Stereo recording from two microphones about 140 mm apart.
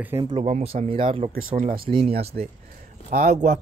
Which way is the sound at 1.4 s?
80° right.